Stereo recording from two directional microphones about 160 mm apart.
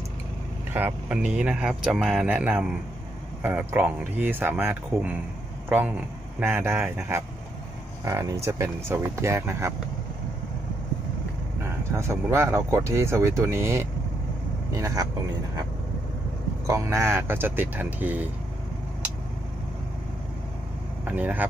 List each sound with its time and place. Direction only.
0.7 s speech: 10° right (ahead or behind)
12.0 s speech: 15° right (ahead or behind)
16.6 s speech: 20° right (ahead or behind)
21.0 s speech: 10° right (ahead or behind)